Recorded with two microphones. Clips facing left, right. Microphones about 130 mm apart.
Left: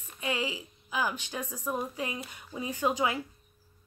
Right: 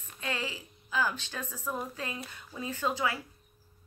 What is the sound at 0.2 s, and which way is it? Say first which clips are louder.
A woman's voice: left 4 dB; 15° left (ahead or behind).